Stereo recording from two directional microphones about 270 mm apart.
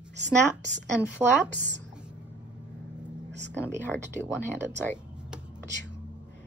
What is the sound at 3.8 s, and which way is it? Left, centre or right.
Speech, centre.